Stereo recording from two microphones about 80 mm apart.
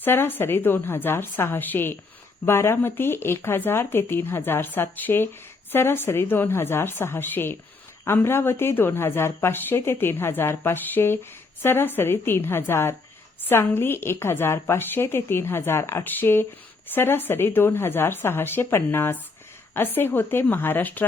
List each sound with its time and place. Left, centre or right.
0.0 s a woman's voice: left